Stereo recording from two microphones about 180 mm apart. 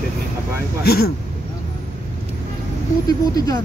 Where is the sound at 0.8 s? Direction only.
60° left (ahead or behind).